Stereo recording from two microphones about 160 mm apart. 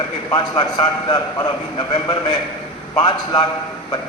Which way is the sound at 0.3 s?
30° left (ahead or behind).